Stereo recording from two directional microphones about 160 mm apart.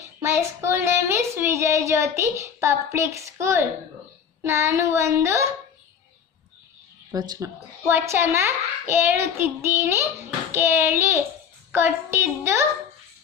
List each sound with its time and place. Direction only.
0.2 s child singing: 15° right (ahead or behind)
7.1 s child singing: 25° right (ahead or behind)